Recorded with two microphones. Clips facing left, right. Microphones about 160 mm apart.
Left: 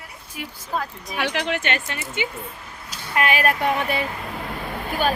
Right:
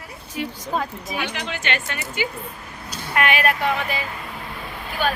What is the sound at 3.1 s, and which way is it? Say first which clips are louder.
Speech: even; 35° left (ahead or behind).